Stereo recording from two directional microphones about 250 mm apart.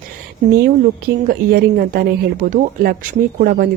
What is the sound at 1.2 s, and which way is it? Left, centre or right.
A woman's voice, right.